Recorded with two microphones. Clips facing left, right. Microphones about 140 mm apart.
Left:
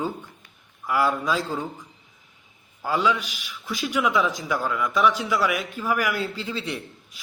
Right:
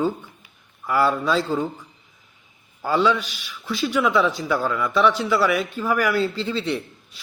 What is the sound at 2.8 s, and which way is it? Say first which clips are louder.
A man's voice: right 3 dB; 10° left (ahead or behind).